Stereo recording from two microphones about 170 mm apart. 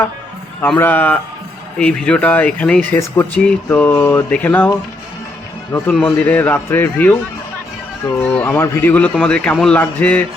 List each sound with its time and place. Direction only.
0.6 s a man's voice: 10° left (ahead or behind)
5.9 s a man's voice: 5° left (ahead or behind)
8.2 s a man's voice: 10° left (ahead or behind)